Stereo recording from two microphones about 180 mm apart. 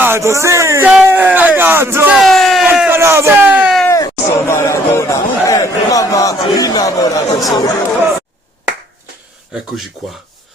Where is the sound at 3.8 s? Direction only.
15° left (ahead or behind).